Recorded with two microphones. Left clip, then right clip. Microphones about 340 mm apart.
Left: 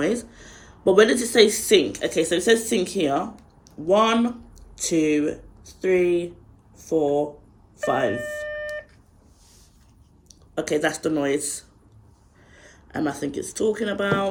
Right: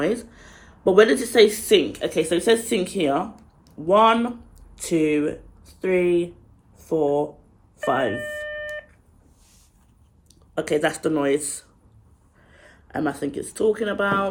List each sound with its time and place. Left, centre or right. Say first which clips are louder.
0.0 s speech: even; centre
8.2 s a sound: even; centre
10.5 s speech: right 1 dB; centre